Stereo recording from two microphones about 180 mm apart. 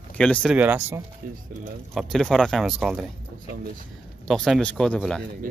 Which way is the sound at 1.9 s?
Centre (ahead or behind).